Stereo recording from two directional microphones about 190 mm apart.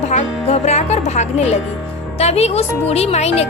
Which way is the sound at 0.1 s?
35° left (ahead or behind).